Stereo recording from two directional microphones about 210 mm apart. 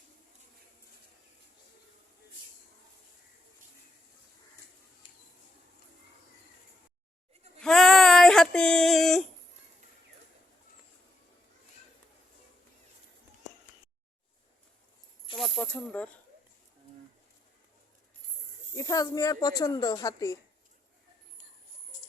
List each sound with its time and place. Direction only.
5.0 s a sound: 25° left (ahead or behind)
7.6 s female singing: centre (ahead or behind)
15.4 s snake: 5° left (ahead or behind)
18.8 s speech: 15° left (ahead or behind)